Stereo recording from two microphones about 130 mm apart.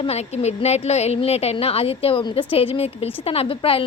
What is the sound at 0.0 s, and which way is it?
A woman's voice, 55° left (ahead or behind).